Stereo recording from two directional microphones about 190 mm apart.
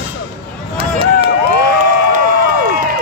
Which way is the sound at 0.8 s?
30° right (ahead or behind).